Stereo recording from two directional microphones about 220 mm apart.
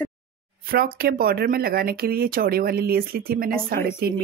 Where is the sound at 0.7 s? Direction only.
45° right (ahead or behind).